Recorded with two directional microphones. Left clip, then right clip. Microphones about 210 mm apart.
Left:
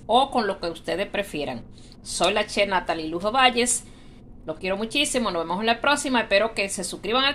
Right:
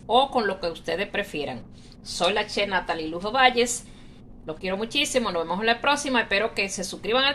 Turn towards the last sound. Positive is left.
turn(degrees=15)  # may be behind; listen again after turning